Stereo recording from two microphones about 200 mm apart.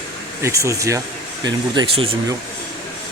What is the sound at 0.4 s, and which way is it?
Speech, 15° right (ahead or behind).